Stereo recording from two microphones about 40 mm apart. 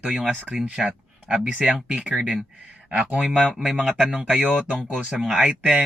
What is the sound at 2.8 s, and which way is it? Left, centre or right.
Speech, right.